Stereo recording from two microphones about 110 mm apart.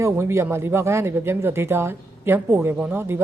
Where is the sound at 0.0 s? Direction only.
25° right (ahead or behind).